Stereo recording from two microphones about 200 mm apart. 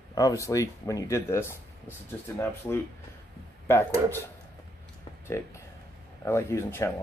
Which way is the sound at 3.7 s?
10° left (ahead or behind).